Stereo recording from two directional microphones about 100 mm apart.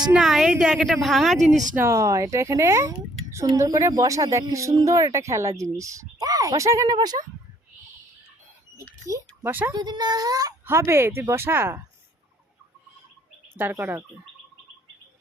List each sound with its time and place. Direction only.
0.1 s a woman's voice: 5° right (ahead or behind)
1.7 s speech: 25° right (ahead or behind); by 7.2 s 45° right (ahead or behind)
9.0 s a sound: 30° right (ahead or behind)
9.5 s speech: 20° right (ahead or behind)
9.7 s speech: 45° right (ahead or behind)
10.7 s speech: 25° right (ahead or behind)
13.6 s speech: 20° right (ahead or behind)